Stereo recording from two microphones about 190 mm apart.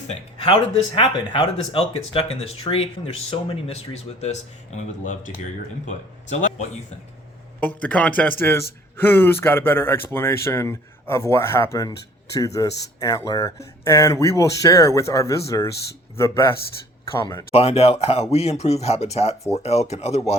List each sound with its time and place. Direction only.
0.1 s speech: 30° left (ahead or behind)
7.8 s speech: 5° left (ahead or behind)
17.5 s speech: 30° left (ahead or behind)